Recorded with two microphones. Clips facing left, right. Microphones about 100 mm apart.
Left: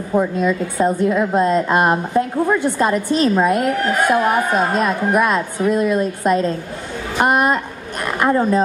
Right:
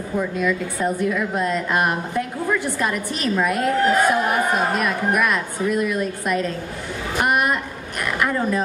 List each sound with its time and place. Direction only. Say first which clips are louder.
0.1 s a woman's voice: left 5 dB; 25° left (ahead or behind)